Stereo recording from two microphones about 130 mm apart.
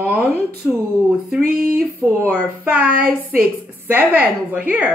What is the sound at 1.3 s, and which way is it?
A woman's voice, 5° right (ahead or behind).